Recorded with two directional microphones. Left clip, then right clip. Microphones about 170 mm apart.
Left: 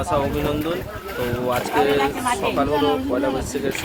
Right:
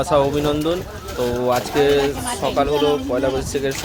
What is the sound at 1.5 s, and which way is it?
Speech, 25° right (ahead or behind).